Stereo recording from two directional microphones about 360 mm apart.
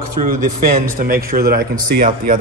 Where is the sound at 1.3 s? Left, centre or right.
Right.